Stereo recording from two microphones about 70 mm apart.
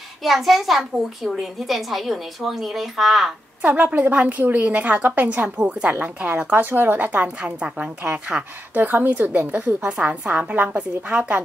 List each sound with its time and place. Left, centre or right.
0.2 s a woman's voice: centre
3.6 s a woman's voice: right
6.4 s a woman's voice: right
8.7 s a woman's voice: right
9.8 s a woman's voice: centre